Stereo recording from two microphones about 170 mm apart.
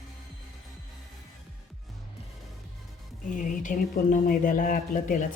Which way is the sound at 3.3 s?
50° left (ahead or behind).